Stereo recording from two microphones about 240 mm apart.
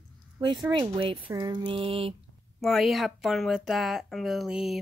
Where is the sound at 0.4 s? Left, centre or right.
Centre.